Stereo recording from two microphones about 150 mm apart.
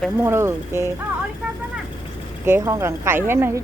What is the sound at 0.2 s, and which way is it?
Speech, 15° right (ahead or behind).